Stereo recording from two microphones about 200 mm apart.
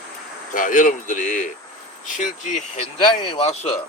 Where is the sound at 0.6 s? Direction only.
40° left (ahead or behind).